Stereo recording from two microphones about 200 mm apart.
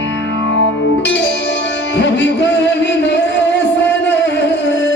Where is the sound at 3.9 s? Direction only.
65° left (ahead or behind).